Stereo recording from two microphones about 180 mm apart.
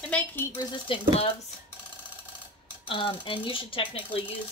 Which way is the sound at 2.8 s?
30° left (ahead or behind).